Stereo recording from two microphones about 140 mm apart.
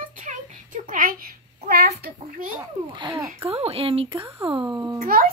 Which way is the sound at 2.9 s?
35° right (ahead or behind).